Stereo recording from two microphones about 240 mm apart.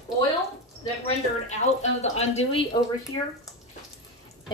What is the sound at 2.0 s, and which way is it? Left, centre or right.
A woman's voice, left.